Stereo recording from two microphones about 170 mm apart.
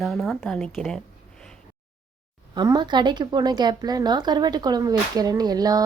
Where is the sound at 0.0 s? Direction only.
Centre (ahead or behind).